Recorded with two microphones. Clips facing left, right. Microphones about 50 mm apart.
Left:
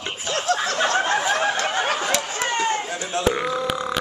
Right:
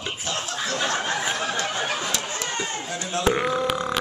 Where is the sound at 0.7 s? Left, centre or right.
Left.